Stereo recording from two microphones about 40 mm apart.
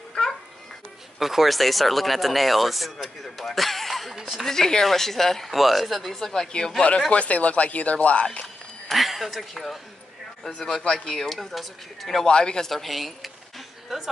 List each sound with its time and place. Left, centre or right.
0.1 s babbling: centre
1.2 s speech: centre
4.5 s a woman's voice: centre
6.1 s a woman's voice: centre
7.1 s speech: left
8.8 s a woman's voice: centre
11.3 s speech: centre
12.3 s speech: left
12.6 s speech: centre